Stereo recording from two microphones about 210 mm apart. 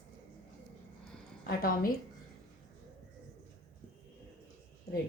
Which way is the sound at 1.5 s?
45° left (ahead or behind).